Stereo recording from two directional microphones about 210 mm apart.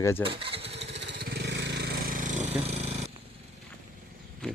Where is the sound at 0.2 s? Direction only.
25° right (ahead or behind).